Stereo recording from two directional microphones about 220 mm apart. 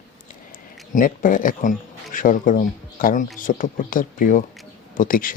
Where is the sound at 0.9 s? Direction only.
35° left (ahead or behind).